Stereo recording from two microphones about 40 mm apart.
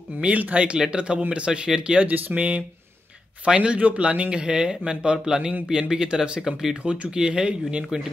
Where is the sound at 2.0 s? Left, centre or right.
Right; by 8.1 s centre.